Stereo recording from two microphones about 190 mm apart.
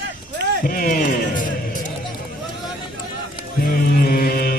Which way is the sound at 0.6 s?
45° left (ahead or behind).